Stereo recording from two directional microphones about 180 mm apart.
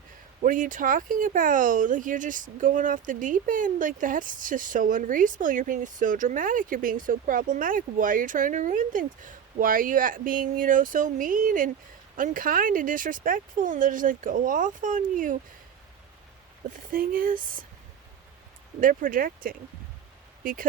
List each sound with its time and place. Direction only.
0.4 s speech: 45° right (ahead or behind)
16.9 s speech: 50° right (ahead or behind)
18.8 s speech: 50° right (ahead or behind)